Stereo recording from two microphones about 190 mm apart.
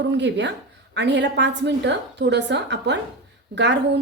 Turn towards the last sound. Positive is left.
turn(degrees=-65)  # may be behind; listen again after turning